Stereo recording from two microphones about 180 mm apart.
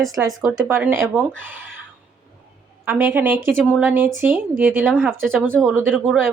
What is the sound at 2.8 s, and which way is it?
Speech, 10° right (ahead or behind).